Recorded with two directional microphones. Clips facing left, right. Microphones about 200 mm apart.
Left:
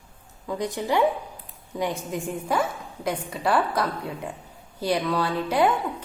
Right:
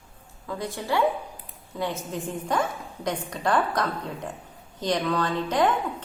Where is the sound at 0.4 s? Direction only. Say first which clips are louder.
Left 4 dB; 15° left (ahead or behind).